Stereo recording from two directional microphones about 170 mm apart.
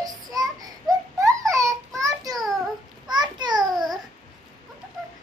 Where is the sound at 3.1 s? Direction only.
25° right (ahead or behind).